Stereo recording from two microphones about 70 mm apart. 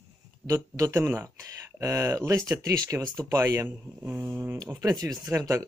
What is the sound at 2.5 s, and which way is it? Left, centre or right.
Speech, right.